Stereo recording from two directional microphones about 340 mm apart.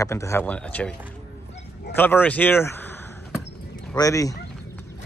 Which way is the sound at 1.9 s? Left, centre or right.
Centre.